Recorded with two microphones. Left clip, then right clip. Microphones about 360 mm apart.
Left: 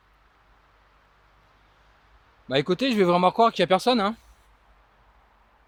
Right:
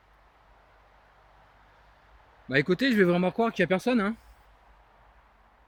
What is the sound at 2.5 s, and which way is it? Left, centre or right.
Speech, centre.